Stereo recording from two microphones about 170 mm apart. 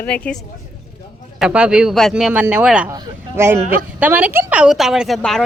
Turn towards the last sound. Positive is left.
turn(degrees=0)  # may be behind; listen again after turning